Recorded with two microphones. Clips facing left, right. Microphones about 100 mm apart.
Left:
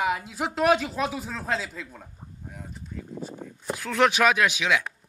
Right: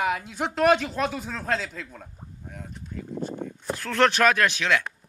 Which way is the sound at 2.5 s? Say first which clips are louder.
Right 2 dB; 5° left (ahead or behind).